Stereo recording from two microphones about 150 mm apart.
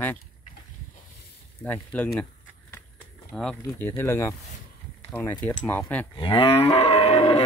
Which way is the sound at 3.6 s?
20° left (ahead or behind).